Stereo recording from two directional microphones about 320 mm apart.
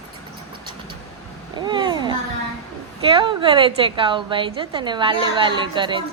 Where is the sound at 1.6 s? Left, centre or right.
Centre.